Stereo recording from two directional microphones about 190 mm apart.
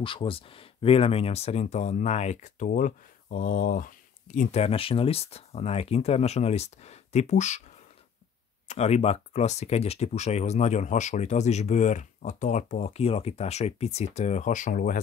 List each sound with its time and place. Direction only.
0.0 s speech: 25° left (ahead or behind)
8.6 s speech: 35° left (ahead or behind)